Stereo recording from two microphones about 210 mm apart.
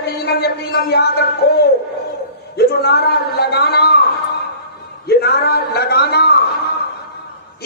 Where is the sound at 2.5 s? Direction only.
50° left (ahead or behind).